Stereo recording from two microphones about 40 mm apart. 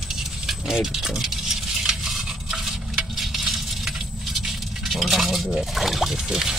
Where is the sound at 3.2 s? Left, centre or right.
Centre.